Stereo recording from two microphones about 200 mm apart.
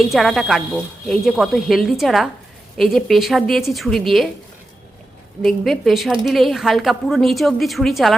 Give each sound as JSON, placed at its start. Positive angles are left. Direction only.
{"t": 0.0, "sound": "a woman's voice", "side_deg": 0}
{"t": 5.4, "sound": "a woman's voice", "side_deg": 0}